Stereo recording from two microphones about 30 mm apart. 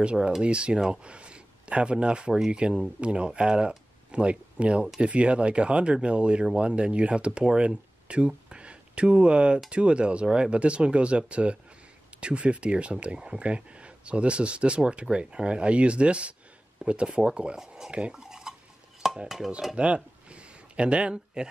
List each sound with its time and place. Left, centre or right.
0.0 s speech: right
8.5 s a sound: right
9.7 s speech: right
17.6 s speech: centre
18.1 s stir: right
19.2 s stir: centre
19.7 s a sound: right
21.4 s speech: right